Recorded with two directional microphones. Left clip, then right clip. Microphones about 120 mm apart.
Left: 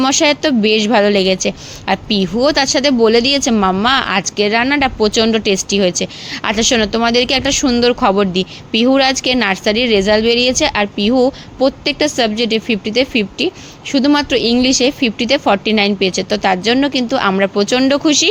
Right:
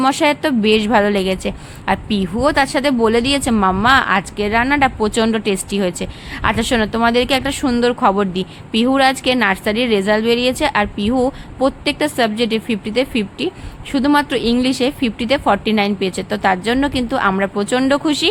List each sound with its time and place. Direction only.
0.0 s a woman's voice: 40° left (ahead or behind)